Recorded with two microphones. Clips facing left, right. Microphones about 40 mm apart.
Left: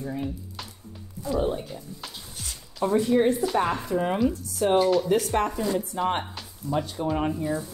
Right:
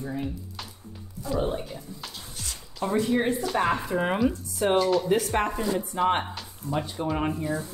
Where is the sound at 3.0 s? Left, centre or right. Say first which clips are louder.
Left 3 dB; centre.